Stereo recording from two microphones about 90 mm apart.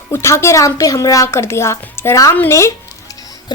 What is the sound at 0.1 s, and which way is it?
A woman's voice, 30° left (ahead or behind).